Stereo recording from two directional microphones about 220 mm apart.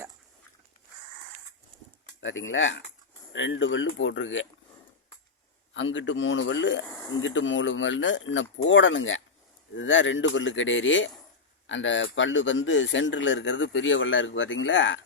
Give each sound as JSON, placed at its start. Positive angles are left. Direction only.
{"t": 2.2, "sound": "speech", "side_deg": 60}
{"t": 5.7, "sound": "speech", "side_deg": 60}